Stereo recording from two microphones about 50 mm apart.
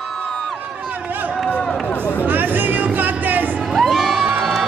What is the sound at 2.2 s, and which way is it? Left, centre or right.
Music, right.